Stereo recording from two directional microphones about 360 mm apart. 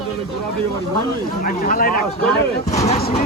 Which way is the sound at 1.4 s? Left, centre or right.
Left.